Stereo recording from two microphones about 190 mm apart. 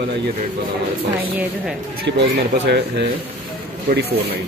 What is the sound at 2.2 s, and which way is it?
Speech, 60° right (ahead or behind).